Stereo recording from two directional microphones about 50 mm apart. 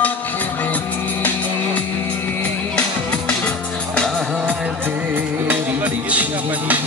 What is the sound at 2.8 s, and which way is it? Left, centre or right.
Music, left.